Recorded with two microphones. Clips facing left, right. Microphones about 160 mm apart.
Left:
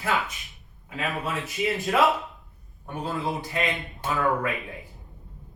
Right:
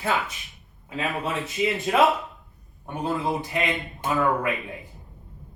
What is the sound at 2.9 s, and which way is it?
A man's voice, 20° right (ahead or behind).